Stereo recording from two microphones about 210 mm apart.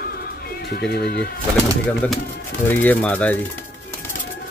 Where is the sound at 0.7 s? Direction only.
50° left (ahead or behind).